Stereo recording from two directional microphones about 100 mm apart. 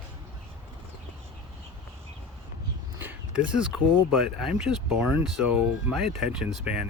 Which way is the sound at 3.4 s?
5° right (ahead or behind).